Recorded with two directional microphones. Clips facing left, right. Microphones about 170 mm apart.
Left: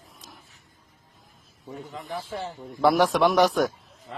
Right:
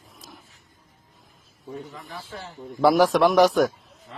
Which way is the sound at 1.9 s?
20° left (ahead or behind).